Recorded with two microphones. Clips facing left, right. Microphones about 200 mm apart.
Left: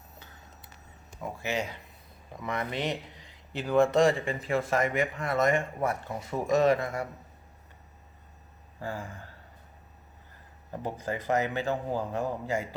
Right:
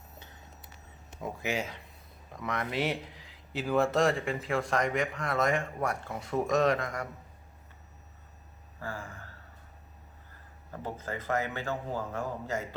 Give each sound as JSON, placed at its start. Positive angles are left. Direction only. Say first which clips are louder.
{"t": 1.4, "sound": "speech", "louder": "left 1 dB", "side_deg": -15}
{"t": 2.3, "sound": "speech", "louder": "even", "side_deg": 0}
{"t": 8.8, "sound": "a man's voice", "louder": "left 3 dB", "side_deg": 20}
{"t": 10.7, "sound": "a man's voice", "louder": "left 4 dB", "side_deg": 15}